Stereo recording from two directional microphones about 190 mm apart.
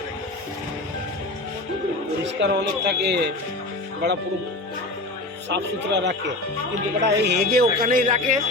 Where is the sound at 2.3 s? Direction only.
65° right (ahead or behind).